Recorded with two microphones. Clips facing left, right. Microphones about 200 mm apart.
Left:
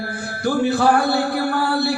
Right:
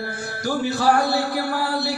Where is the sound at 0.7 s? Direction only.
55° left (ahead or behind).